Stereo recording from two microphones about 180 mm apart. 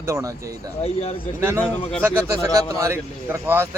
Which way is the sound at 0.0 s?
15° right (ahead or behind).